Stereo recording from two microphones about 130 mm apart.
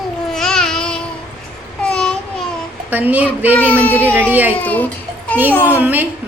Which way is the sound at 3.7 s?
15° left (ahead or behind).